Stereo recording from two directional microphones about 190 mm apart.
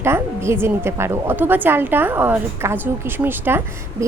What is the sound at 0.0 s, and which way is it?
A woman's voice, 15° right (ahead or behind).